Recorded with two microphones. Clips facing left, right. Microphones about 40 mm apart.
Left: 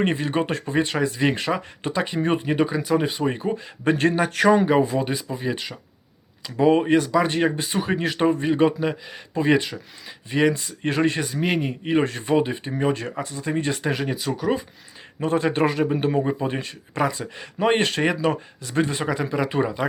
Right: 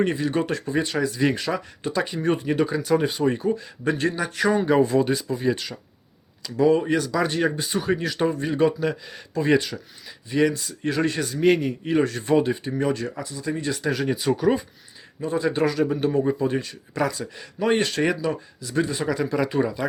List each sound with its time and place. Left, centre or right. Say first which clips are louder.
0.0 s a man's voice: even; left
2.7 s speech: even; centre
3.2 s speech: right 2 dB; left
3.8 s a man's voice: left 4 dB; left
4.4 s speech: left 4 dB; left
4.6 s speech: right 1 dB; centre
6.4 s a man's voice: left 1 dB; left
11.2 s speech: right 4 dB; centre
12.3 s speech: right 1 dB; centre
12.6 s a man's voice: left 1 dB; left
14.1 s speech: right 3 dB; centre
15.2 s a man's voice: left 2 dB; left
19.0 s speech: even; left